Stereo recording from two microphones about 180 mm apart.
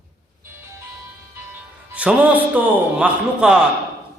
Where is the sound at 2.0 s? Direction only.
10° right (ahead or behind).